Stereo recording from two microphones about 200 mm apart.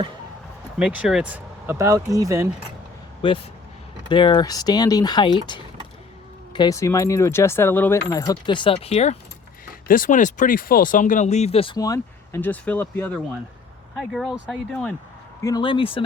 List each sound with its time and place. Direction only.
0.8 s speech: 5° right (ahead or behind)
3.2 s speech: 25° left (ahead or behind)
9.8 s speech: 45° left (ahead or behind); by 14.9 s 5° left (ahead or behind)
15.4 s speech: 20° left (ahead or behind)